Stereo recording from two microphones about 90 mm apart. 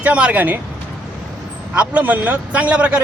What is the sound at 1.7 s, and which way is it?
Speech, 15° right (ahead or behind).